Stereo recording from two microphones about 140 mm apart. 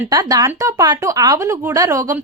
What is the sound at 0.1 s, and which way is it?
A woman's voice, 25° right (ahead or behind).